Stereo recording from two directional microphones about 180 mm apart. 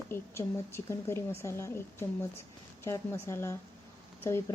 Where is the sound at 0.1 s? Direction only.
15° left (ahead or behind).